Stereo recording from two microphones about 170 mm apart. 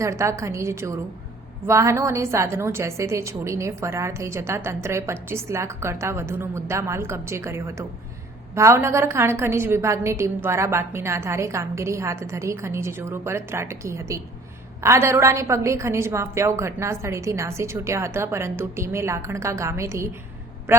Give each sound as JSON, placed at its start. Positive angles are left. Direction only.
{"t": 0.0, "sound": "a woman's voice", "side_deg": -15}